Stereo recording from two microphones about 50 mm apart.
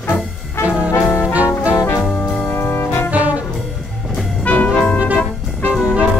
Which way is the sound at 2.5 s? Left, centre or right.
Left.